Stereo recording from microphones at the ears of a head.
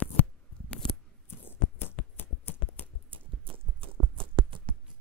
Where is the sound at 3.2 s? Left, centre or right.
Right.